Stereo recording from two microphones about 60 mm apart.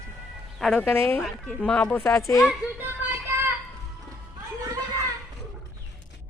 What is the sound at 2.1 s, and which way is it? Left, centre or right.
Speech, left.